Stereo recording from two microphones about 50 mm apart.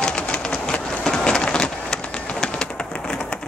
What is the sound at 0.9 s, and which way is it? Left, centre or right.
Vehicle, centre.